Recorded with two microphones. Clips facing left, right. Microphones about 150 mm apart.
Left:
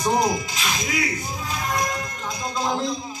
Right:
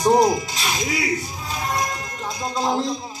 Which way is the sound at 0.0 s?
35° right (ahead or behind).